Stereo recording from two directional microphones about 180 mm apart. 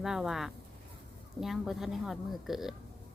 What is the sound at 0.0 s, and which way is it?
A woman's voice, centre (ahead or behind).